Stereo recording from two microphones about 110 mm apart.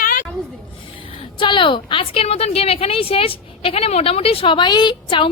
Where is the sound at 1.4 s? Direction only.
50° left (ahead or behind).